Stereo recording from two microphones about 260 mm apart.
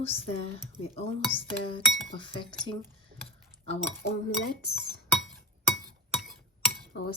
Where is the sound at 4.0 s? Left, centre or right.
Left.